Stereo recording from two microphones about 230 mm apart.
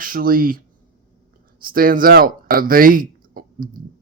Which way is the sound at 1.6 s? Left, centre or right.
Right.